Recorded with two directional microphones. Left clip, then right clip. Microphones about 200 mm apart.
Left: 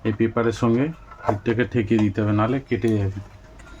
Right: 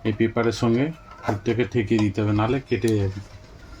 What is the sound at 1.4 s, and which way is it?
Speech, 20° left (ahead or behind).